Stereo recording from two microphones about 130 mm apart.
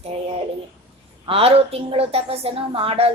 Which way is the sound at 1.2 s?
50° right (ahead or behind).